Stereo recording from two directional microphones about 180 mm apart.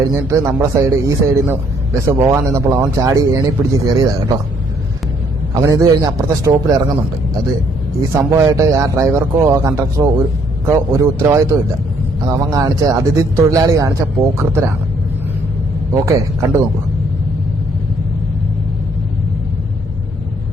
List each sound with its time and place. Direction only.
0.0 s a man's voice: 15° right (ahead or behind)
5.5 s speech: 20° right (ahead or behind)
8.1 s a man's voice: 15° right (ahead or behind)
15.9 s a man's voice: 20° right (ahead or behind)